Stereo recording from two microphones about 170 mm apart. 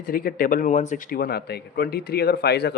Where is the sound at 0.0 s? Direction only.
55° left (ahead or behind).